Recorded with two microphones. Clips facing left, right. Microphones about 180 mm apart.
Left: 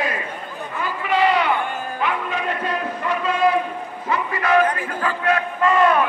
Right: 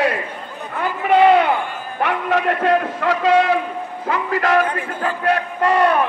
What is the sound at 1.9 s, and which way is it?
A man's voice, 75° right (ahead or behind).